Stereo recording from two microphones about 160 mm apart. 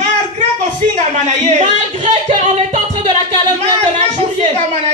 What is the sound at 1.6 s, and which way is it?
Music, 45° right (ahead or behind).